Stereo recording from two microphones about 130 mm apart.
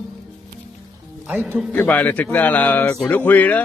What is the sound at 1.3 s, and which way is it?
Music, 15° right (ahead or behind).